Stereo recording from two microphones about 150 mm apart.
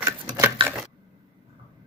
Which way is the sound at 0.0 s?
15° right (ahead or behind).